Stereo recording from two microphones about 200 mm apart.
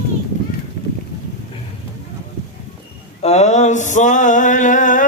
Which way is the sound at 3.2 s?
35° left (ahead or behind).